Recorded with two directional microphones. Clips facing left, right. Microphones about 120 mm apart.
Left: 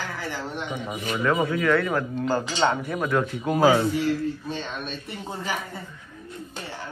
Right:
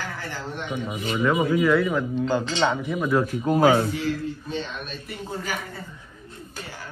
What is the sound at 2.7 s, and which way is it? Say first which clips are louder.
Speech: right 1 dB; centre (ahead or behind).